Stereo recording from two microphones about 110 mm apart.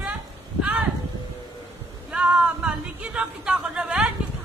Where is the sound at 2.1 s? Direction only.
10° right (ahead or behind).